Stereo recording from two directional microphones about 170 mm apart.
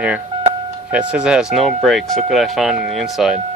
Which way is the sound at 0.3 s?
30° right (ahead or behind).